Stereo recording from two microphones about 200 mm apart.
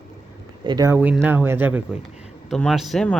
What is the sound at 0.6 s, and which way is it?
Speech, 20° right (ahead or behind).